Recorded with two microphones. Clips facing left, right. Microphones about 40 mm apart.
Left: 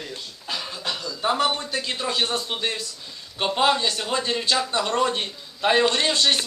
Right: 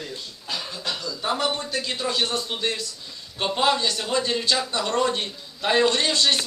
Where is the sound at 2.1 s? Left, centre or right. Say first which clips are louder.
Left 1 dB; left.